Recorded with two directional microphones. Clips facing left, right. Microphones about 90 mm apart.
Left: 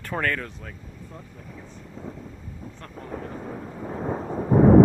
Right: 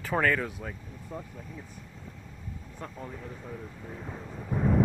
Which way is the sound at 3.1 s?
60° left (ahead or behind).